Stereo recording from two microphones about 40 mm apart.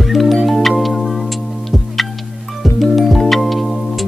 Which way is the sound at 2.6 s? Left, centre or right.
Centre.